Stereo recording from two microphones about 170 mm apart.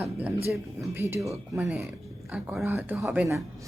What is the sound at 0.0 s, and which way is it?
Speech, 10° right (ahead or behind).